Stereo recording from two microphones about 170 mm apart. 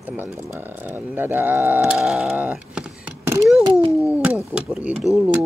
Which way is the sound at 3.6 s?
30° right (ahead or behind).